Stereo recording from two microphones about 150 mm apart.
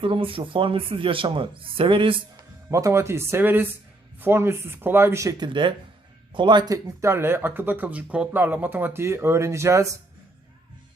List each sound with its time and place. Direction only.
0.0 s speech: 35° right (ahead or behind)
2.6 s speech: 20° right (ahead or behind)
5.5 s speech: 35° right (ahead or behind)